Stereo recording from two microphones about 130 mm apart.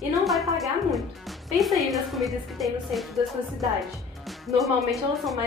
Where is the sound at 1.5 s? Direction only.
Centre (ahead or behind).